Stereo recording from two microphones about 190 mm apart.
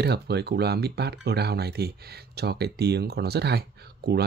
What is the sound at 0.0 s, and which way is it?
Speech, 60° right (ahead or behind).